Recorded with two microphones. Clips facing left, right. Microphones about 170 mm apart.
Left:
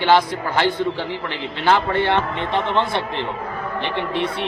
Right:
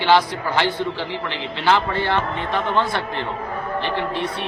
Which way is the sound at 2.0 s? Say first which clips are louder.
Left 2 dB; 25° left (ahead or behind).